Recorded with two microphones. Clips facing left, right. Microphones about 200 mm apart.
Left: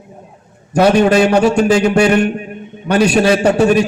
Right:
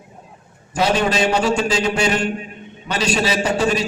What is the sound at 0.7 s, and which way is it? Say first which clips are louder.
A man's voice: left 8 dB; 60° left (ahead or behind).